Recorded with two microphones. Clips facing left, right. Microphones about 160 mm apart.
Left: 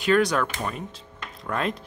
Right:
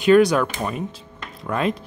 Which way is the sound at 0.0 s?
10° right (ahead or behind).